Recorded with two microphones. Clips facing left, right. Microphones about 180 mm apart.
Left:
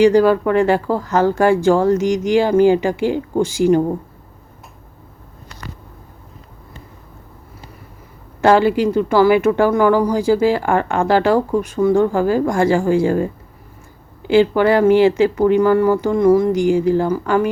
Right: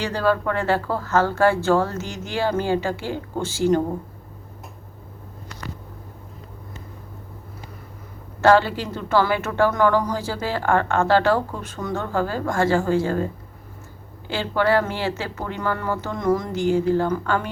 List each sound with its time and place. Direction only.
0.0 s speech: 15° left (ahead or behind)
8.4 s speech: 15° left (ahead or behind)